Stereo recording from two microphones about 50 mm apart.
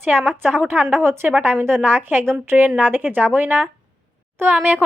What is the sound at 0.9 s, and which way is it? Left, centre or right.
A woman's voice, right.